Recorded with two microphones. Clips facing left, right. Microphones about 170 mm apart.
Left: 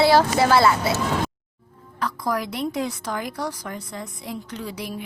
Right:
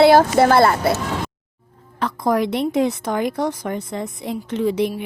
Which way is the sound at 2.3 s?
25° right (ahead or behind).